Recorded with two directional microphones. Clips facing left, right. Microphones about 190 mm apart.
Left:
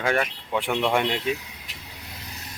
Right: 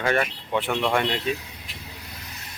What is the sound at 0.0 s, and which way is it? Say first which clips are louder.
Speech: right 1 dB; 5° left (ahead or behind).